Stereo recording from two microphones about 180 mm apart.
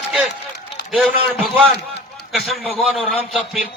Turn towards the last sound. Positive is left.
turn(degrees=0)  # may be behind; listen again after turning